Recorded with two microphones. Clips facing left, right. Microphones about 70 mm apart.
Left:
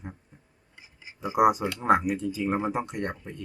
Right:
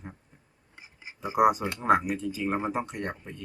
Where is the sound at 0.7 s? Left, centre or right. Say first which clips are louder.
Right 2 dB; right.